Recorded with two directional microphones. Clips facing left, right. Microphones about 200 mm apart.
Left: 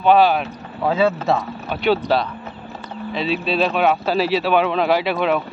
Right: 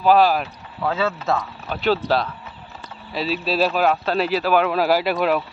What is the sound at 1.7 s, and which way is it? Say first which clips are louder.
Speech: left 2 dB; centre (ahead or behind).